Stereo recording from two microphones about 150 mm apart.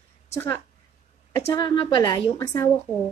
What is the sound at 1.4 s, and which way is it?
A woman's voice, 25° left (ahead or behind).